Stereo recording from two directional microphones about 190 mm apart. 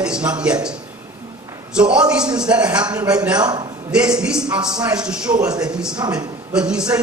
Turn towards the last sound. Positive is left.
turn(degrees=-5)  # may be behind; listen again after turning